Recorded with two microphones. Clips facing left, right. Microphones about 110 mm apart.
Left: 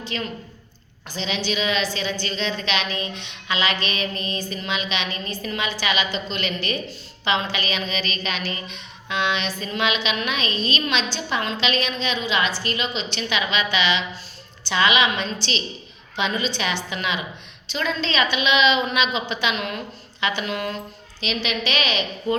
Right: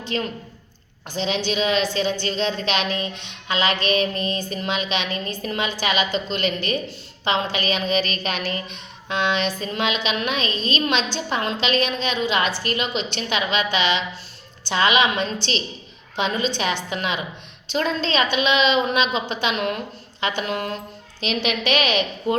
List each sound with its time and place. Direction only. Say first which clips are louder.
0.1 s a woman's voice: right 5 dB; 40° right (ahead or behind)